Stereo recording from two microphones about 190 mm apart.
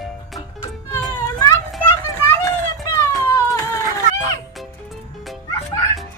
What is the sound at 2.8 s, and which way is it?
Cat, 15° left (ahead or behind).